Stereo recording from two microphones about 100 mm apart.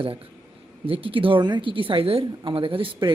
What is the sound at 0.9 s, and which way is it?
Speech, 65° right (ahead or behind).